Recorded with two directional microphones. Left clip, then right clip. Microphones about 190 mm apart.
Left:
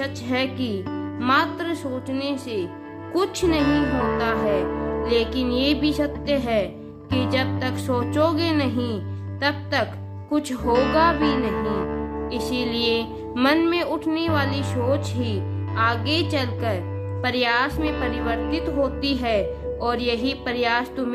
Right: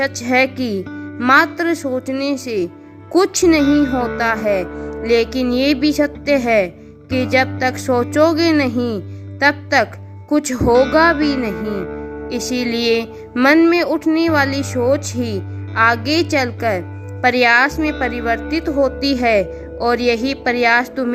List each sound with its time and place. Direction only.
0.0 s music: 40° right (ahead or behind)
9.4 s a woman's voice: 35° right (ahead or behind)
10.2 s music: 35° right (ahead or behind)